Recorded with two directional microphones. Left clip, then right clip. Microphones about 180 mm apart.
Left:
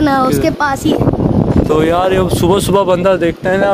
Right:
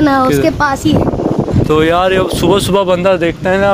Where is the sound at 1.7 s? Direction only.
5° left (ahead or behind).